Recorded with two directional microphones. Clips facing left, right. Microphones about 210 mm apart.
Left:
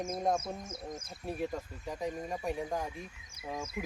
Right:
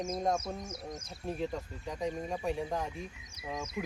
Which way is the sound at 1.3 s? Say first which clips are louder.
Even; 10° left (ahead or behind).